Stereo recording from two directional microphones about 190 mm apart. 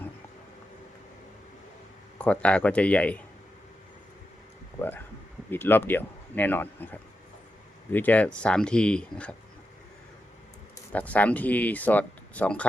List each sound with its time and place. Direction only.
2.1 s speech: 5° left (ahead or behind)
4.8 s speech: 10° left (ahead or behind)
10.9 s speech: 5° left (ahead or behind)